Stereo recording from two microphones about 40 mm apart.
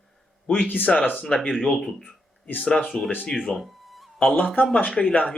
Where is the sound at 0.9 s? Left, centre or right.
Centre.